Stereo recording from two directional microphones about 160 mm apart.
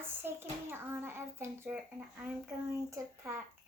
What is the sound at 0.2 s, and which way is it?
A child's voice, 15° right (ahead or behind).